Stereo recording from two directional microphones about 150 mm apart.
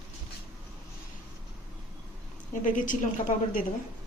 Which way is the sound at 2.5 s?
60° left (ahead or behind).